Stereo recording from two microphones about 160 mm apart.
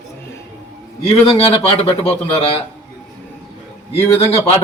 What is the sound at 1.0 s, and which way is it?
A man's voice, 40° left (ahead or behind).